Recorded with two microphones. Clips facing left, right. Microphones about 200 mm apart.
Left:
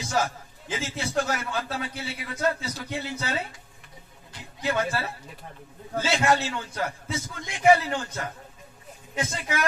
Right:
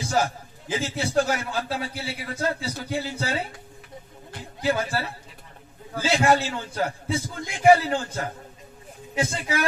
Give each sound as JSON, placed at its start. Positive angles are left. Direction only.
{"t": 0.0, "sound": "a sound", "side_deg": -30}
{"t": 0.7, "sound": "a man's voice", "side_deg": -30}
{"t": 4.6, "sound": "a man's voice", "side_deg": -30}